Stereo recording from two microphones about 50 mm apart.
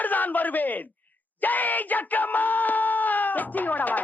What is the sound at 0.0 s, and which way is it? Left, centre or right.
Speech, left.